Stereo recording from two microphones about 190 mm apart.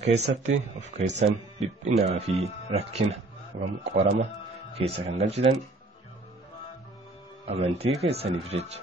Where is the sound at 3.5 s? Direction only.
55° right (ahead or behind).